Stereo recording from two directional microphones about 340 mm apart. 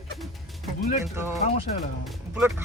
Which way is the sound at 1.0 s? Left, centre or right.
Centre.